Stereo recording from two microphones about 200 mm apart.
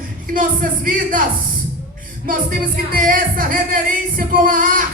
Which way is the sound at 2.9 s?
45° right (ahead or behind).